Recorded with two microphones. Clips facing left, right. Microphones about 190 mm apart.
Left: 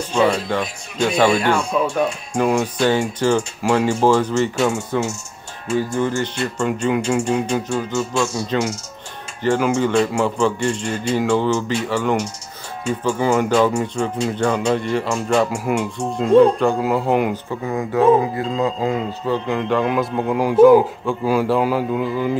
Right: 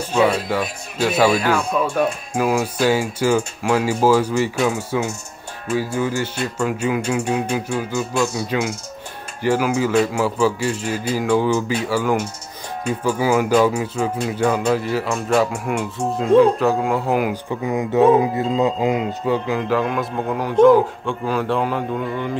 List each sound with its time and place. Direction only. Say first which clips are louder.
0.1 s speech: even; 5° right (ahead or behind)
17.6 s speech: right 1 dB; 20° right (ahead or behind)
19.4 s speech: left 1 dB; 5° right (ahead or behind)